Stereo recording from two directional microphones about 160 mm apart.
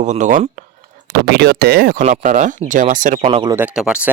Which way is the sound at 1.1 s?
90° right.